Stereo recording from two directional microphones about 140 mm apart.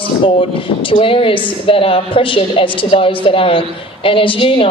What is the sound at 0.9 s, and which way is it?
A woman's voice, 40° left (ahead or behind).